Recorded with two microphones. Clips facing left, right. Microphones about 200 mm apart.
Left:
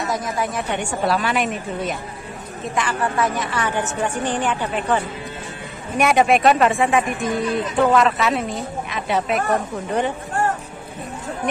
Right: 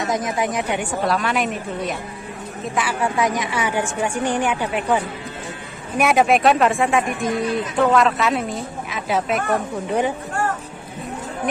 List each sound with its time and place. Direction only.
0.0 s a woman's voice: 20° right (ahead or behind)
1.0 s a woman's voice: centre (ahead or behind)